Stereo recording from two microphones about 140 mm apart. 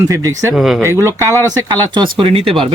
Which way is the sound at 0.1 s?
20° right (ahead or behind).